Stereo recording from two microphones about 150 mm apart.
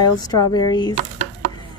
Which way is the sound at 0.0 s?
25° left (ahead or behind).